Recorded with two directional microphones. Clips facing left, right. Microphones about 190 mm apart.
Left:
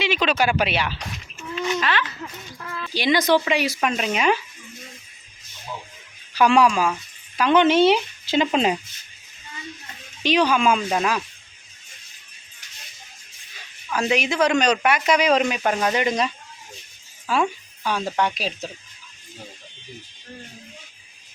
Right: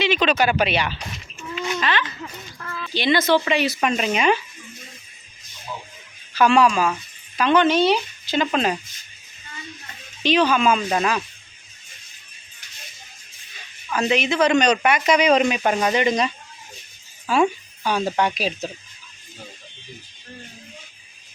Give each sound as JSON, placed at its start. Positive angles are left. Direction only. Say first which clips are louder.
{"t": 0.0, "sound": "speech", "louder": "right 2 dB", "side_deg": 10}
{"t": 3.8, "sound": "speech", "louder": "right 2 dB", "side_deg": 0}
{"t": 6.3, "sound": "speech", "louder": "even", "side_deg": 15}
{"t": 10.2, "sound": "speech", "louder": "right 1 dB", "side_deg": 10}
{"t": 13.9, "sound": "speech", "louder": "right 1 dB", "side_deg": 10}